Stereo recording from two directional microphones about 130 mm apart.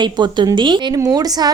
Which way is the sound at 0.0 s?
35° right (ahead or behind).